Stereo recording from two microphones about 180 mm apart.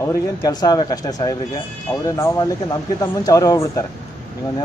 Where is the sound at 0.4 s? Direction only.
20° left (ahead or behind).